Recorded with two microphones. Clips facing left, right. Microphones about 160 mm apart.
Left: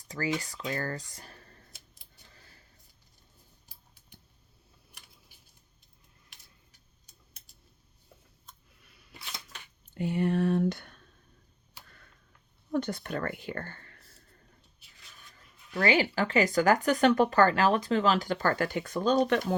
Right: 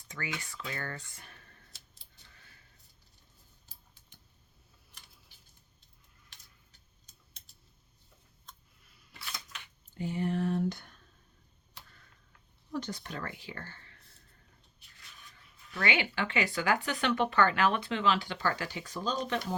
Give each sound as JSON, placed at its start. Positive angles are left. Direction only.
{"t": 0.3, "sound": "speech", "side_deg": 35}
{"t": 6.3, "sound": "a sound", "side_deg": 10}
{"t": 9.9, "sound": "speech", "side_deg": 65}
{"t": 12.7, "sound": "speech", "side_deg": 55}
{"t": 15.4, "sound": "speech", "side_deg": 35}